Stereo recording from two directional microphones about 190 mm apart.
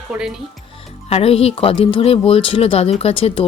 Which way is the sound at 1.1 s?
30° left (ahead or behind).